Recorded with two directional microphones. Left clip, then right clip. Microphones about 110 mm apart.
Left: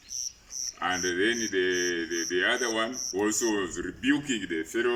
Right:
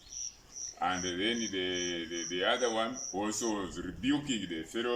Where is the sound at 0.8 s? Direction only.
25° right (ahead or behind).